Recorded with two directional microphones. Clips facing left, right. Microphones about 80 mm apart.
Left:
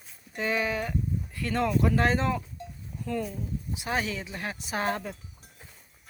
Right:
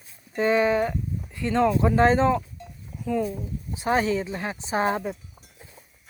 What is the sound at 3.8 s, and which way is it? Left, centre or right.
Speech, right.